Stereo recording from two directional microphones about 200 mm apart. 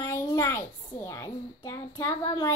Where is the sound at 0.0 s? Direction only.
15° left (ahead or behind).